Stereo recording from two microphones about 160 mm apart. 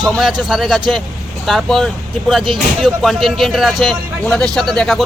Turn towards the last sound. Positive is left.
turn(degrees=0)  # may be behind; listen again after turning